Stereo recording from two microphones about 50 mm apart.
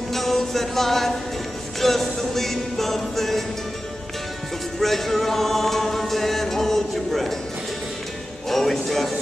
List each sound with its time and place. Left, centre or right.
0.1 s music: centre
4.7 s music: centre
8.5 s music: centre